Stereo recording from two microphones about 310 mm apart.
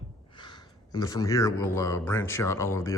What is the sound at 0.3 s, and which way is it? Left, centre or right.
Speech, centre.